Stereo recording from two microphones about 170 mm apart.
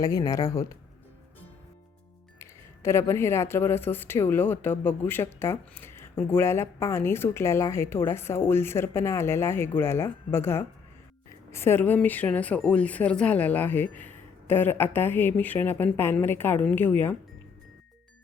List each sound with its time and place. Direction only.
0.0 s speech: 20° left (ahead or behind)
2.4 s speech: 15° left (ahead or behind)